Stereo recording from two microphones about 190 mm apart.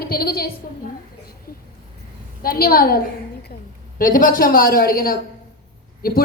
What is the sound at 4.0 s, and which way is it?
A woman's voice, 45° left (ahead or behind).